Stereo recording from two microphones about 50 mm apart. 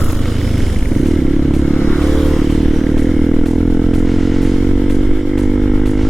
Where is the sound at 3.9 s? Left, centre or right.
Centre.